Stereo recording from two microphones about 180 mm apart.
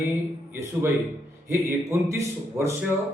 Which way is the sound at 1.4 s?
15° right (ahead or behind).